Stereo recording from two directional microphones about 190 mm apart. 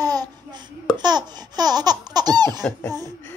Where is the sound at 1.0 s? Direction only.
20° right (ahead or behind).